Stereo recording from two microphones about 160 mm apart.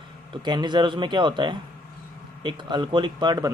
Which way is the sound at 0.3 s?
30° right (ahead or behind).